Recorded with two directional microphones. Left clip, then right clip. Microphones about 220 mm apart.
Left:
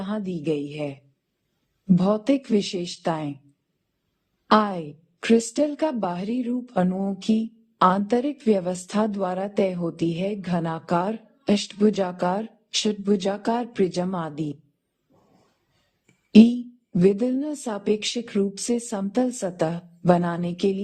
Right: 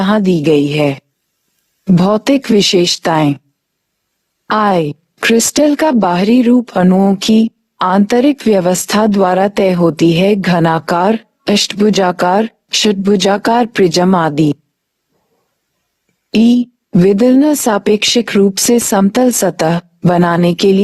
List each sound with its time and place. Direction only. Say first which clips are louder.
0.0 s a woman's voice: right 17 dB; 45° right (ahead or behind)
4.4 s a woman's voice: right 9 dB; 45° right (ahead or behind)
16.3 s a woman's voice: right 6 dB; 45° right (ahead or behind)